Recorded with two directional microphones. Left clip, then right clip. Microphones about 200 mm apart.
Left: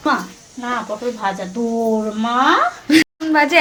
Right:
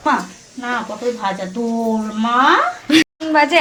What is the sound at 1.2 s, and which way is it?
A woman's voice, 15° left (ahead or behind).